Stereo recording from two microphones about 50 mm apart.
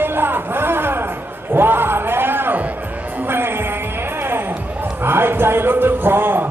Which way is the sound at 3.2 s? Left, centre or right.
Right.